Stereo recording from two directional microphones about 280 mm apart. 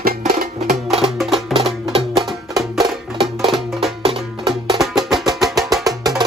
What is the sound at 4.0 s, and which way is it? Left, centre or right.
Music, centre.